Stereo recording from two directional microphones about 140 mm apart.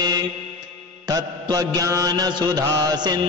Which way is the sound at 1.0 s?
25° right (ahead or behind).